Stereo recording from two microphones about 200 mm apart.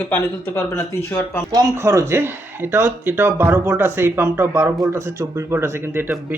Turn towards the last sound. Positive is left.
turn(degrees=-10)  # may be behind; listen again after turning